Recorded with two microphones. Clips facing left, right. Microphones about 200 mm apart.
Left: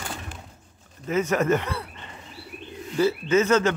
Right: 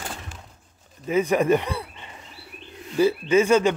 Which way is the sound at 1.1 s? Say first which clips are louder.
Right 3 dB; 15° right (ahead or behind).